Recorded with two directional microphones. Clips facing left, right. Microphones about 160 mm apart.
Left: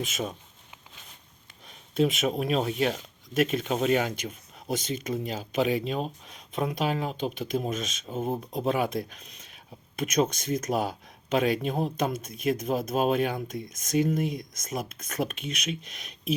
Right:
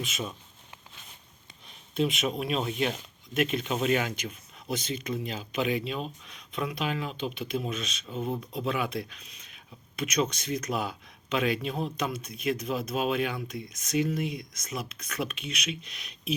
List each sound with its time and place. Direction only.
0.0 s speech: 45° left (ahead or behind)
2.0 s speech: 45° left (ahead or behind)